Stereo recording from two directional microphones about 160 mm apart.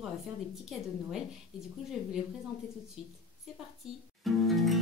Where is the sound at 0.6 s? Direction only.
Centre (ahead or behind).